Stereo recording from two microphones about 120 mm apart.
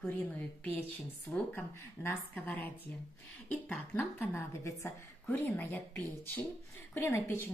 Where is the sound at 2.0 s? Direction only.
15° left (ahead or behind).